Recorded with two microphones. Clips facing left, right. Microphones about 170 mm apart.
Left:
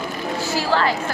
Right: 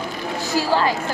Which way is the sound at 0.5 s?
15° right (ahead or behind).